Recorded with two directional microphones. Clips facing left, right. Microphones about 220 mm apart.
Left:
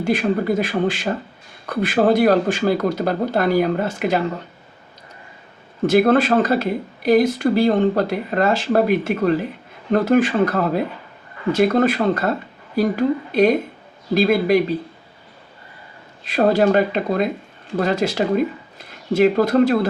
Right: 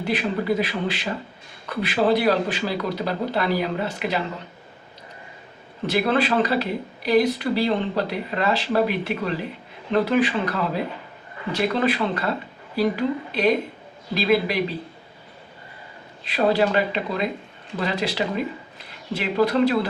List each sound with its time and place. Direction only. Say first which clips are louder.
0.0 s speech: left 5 dB; 45° left (ahead or behind)
5.8 s speech: left 7 dB; 45° left (ahead or behind)
16.2 s speech: left 4 dB; 45° left (ahead or behind)